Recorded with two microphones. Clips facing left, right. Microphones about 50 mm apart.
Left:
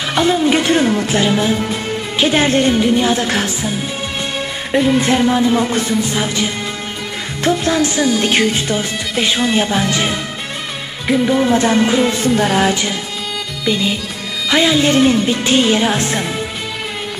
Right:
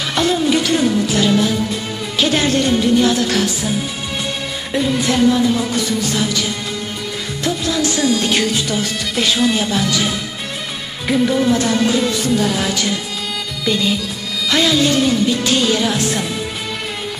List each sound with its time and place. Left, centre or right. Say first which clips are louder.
0.1 s a sound: left 3 dB; centre
0.5 s music: left 2 dB; left
1.1 s speech: left 1 dB; left
4.7 s speech: left 3 dB; left
7.4 s music: left 4 dB; left
8.7 s speech: left 1 dB; left
11.1 s music: left 1 dB; centre; by 12.7 s left
13.7 s music: left 1 dB; centre
14.5 s speech: left 2 dB; left